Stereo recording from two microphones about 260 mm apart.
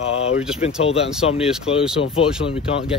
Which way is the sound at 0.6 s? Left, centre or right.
Left.